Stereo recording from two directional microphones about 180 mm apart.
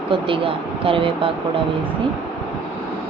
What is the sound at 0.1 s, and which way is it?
Speech, 30° right (ahead or behind).